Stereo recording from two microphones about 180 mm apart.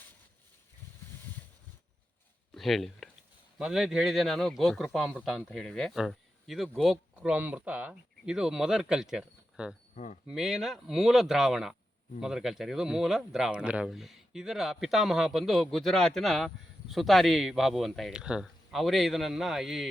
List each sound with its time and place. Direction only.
2.6 s a sound: centre (ahead or behind)
3.6 s speech: centre (ahead or behind)
9.9 s speech: 45° left (ahead or behind)
10.2 s speech: centre (ahead or behind)